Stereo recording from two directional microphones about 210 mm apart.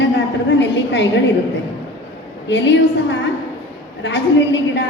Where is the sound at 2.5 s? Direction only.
55° left (ahead or behind).